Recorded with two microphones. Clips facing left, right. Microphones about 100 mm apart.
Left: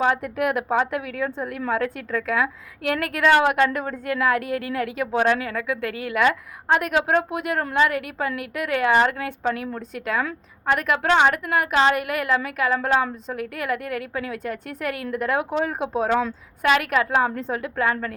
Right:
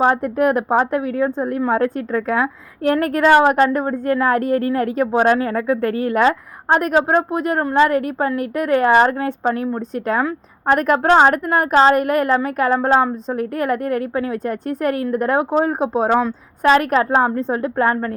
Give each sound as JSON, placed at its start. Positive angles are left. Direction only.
{"t": 0.0, "sound": "a woman's voice", "side_deg": -35}